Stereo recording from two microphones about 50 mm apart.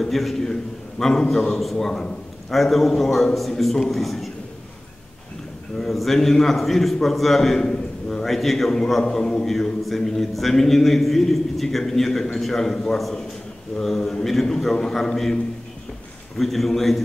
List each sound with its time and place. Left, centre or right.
0.0 s a man's voice: centre
5.8 s a man's voice: centre
9.0 s a man's voice: centre
16.3 s a man's voice: centre